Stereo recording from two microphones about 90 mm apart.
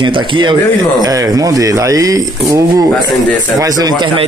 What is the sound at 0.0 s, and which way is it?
Speech, 60° right (ahead or behind).